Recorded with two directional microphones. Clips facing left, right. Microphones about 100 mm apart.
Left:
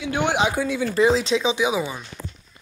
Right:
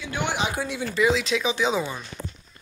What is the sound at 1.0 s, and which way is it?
Speech, 30° left (ahead or behind).